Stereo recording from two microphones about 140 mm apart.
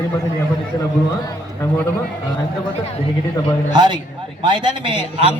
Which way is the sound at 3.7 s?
30° right (ahead or behind).